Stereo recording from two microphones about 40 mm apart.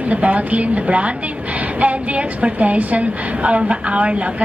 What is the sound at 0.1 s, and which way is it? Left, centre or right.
A woman's voice, right.